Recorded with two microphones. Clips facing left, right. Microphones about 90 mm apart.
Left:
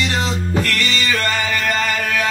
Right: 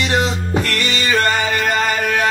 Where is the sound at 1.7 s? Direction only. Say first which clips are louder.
Right 2 dB; 20° right (ahead or behind).